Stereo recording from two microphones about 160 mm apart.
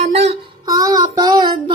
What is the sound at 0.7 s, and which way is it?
Child singing, 20° right (ahead or behind).